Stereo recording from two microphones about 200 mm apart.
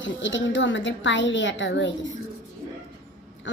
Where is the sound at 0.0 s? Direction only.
65° left (ahead or behind).